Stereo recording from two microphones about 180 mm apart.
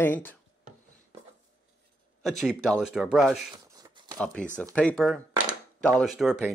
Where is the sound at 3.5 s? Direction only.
20° right (ahead or behind).